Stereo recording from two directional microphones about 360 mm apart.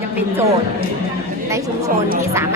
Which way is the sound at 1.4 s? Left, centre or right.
Centre.